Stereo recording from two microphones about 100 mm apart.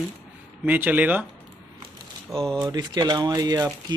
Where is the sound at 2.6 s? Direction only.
40° right (ahead or behind).